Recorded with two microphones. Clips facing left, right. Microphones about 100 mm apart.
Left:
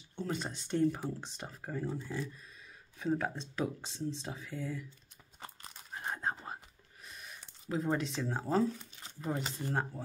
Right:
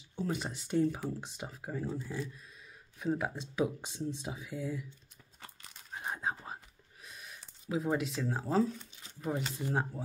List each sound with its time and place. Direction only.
0.1 s speech: 5° right (ahead or behind)
5.9 s whispering: 5° right (ahead or behind)
7.1 s speech: centre (ahead or behind)